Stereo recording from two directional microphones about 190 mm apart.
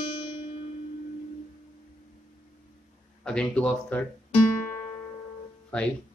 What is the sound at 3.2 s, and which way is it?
Speech, 5° left (ahead or behind).